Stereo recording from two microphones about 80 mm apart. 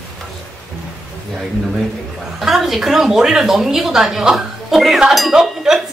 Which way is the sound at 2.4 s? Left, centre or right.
Centre.